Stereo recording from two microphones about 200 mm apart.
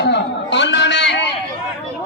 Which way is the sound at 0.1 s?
60° left (ahead or behind).